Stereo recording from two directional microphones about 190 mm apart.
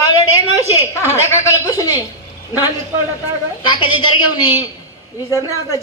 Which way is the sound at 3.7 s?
25° left (ahead or behind).